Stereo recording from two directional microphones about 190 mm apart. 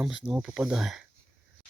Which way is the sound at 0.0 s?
10° right (ahead or behind).